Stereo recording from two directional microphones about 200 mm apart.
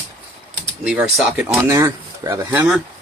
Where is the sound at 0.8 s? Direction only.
5° right (ahead or behind).